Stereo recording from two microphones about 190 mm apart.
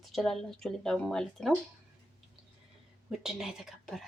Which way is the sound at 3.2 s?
5° right (ahead or behind).